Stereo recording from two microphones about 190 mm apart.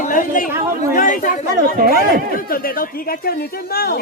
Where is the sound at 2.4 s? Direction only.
50° left (ahead or behind).